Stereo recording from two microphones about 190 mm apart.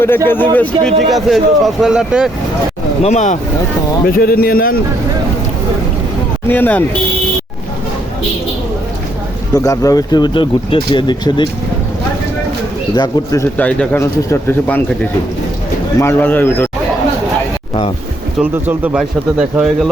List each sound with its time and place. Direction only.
0.5 s speech: 5° left (ahead or behind)
3.0 s speech: 35° left (ahead or behind)
4.0 s a man's voice: 50° left (ahead or behind)
6.5 s speech: 10° left (ahead or behind)
9.6 s speech: 20° left (ahead or behind)
13.0 s speech: 15° left (ahead or behind)
16.0 s speech: 10° left (ahead or behind)
18.3 s speech: 10° right (ahead or behind)